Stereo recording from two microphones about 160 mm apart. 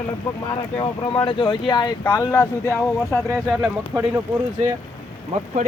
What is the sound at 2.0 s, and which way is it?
Speech, 15° left (ahead or behind).